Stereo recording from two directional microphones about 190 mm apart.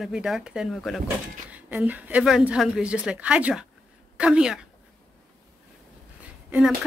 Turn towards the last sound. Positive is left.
turn(degrees=-5)  # may be behind; listen again after turning